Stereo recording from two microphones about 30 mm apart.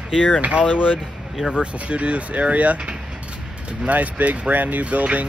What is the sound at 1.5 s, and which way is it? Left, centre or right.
Speech, right.